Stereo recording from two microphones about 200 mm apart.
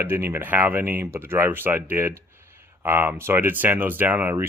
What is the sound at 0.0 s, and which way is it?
Speech, 10° right (ahead or behind).